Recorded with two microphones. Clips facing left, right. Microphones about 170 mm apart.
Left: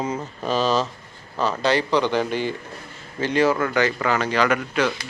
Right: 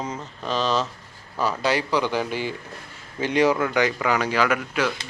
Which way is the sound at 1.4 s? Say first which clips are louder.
Left 2 dB; 10° right (ahead or behind).